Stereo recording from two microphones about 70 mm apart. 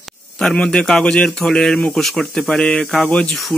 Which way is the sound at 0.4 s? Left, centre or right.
Centre.